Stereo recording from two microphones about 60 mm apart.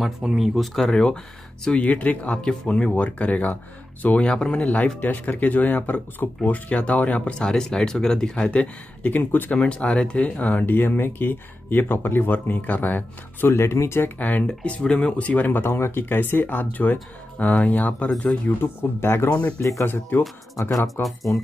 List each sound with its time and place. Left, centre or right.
0.3 s speech: centre
5.0 s speech: left
9.6 s speech: centre
10.6 s speech: left
14.1 s speech: left
18.6 s speech: left
20.8 s speech: centre